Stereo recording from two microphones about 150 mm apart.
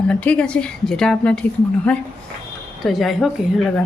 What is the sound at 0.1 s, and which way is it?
A woman's voice, 5° left (ahead or behind).